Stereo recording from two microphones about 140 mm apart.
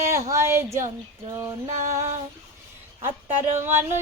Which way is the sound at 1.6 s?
55° right (ahead or behind).